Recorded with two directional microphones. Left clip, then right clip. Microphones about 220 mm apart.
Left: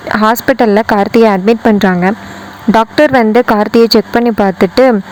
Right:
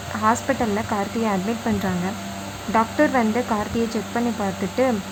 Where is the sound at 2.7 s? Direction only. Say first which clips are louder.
Left 11 dB; 45° left (ahead or behind).